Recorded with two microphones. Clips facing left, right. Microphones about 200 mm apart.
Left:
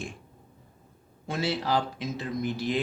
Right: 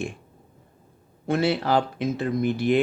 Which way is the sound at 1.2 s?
60° right (ahead or behind).